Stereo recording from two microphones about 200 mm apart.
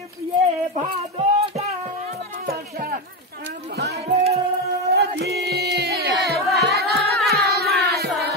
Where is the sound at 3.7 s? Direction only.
55° right (ahead or behind).